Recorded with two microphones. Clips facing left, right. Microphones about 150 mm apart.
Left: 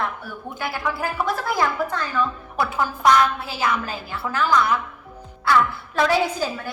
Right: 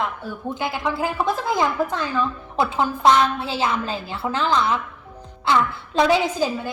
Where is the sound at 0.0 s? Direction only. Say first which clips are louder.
Right 2 dB; 20° right (ahead or behind).